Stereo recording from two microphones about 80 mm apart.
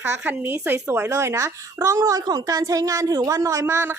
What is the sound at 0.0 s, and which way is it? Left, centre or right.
A woman's voice, right.